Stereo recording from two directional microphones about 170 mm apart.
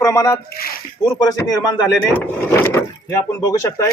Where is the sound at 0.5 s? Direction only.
60° left (ahead or behind).